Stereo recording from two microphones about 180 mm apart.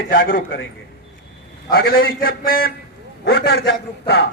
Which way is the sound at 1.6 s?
55° left (ahead or behind).